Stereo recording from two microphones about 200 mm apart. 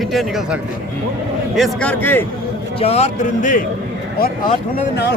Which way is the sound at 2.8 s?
30° left (ahead or behind).